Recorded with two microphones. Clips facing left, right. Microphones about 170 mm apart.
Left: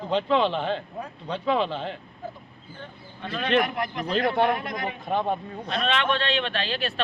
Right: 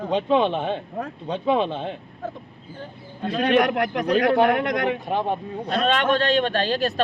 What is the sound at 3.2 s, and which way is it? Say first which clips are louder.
Speech: right 7 dB; 40° right (ahead or behind).